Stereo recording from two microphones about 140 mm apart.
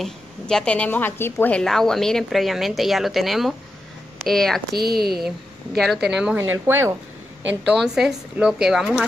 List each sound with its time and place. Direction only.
0.0 s a woman's voice: 5° left (ahead or behind)
4.9 s speech: 90° right
5.8 s a woman's voice: centre (ahead or behind)
6.3 s speech: 15° right (ahead or behind)
7.7 s a woman's voice: centre (ahead or behind)